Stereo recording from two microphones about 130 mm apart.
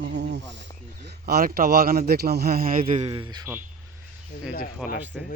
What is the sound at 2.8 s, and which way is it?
Speech, 45° right (ahead or behind).